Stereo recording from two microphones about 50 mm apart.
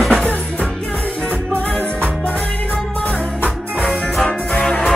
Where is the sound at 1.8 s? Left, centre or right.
Left.